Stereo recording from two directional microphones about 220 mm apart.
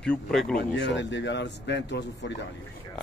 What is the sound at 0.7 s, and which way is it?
Speech, 55° left (ahead or behind).